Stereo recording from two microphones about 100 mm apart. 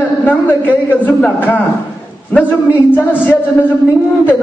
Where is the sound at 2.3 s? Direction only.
15° left (ahead or behind).